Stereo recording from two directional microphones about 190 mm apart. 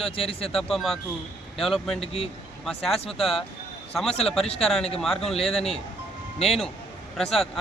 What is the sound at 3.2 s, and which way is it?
A man's voice, centre (ahead or behind).